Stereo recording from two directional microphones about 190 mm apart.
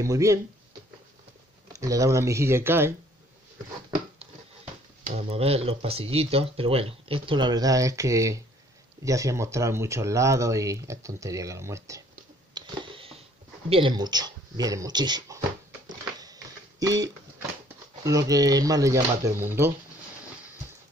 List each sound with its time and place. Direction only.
0.0 s speech: 15° right (ahead or behind)
1.7 s speech: 15° right (ahead or behind)
5.0 s speech: 30° right (ahead or behind); by 12.0 s 15° right (ahead or behind)
12.5 s a sound: 30° right (ahead or behind)
13.7 s speech: 25° right (ahead or behind)
16.8 s speech: 20° right (ahead or behind)